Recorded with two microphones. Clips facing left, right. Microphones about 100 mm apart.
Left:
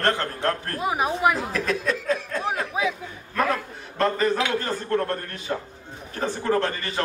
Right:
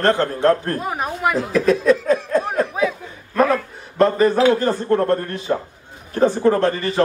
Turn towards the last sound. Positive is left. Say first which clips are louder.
# right 7 dB
turn(degrees=-30)  # may be behind; listen again after turning